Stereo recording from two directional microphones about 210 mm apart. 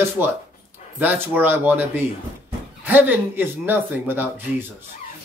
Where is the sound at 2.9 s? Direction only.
10° right (ahead or behind).